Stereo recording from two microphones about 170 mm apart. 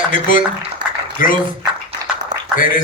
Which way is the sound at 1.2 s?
50° left (ahead or behind).